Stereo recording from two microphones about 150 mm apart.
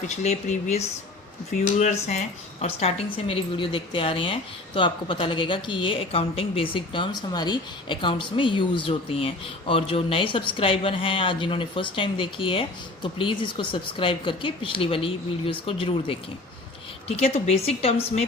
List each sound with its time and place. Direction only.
0.1 s a woman's voice: 50° left (ahead or behind)